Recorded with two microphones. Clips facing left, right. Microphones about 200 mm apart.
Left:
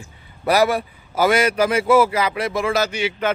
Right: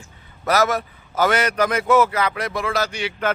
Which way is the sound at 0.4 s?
10° left (ahead or behind).